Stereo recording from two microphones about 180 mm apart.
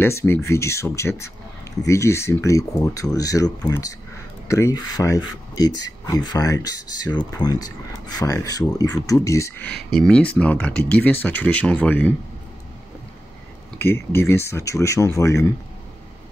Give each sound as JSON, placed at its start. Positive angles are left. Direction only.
{"t": 0.0, "sound": "speech", "side_deg": 15}
{"t": 9.7, "sound": "speech", "side_deg": 60}
{"t": 9.9, "sound": "speech", "side_deg": 5}
{"t": 13.7, "sound": "speech", "side_deg": 10}